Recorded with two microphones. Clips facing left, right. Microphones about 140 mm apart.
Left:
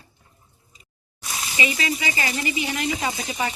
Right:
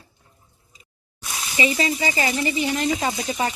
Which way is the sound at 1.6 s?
30° right (ahead or behind).